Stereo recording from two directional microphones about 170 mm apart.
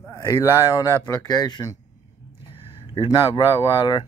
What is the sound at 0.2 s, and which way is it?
Speech, 20° left (ahead or behind).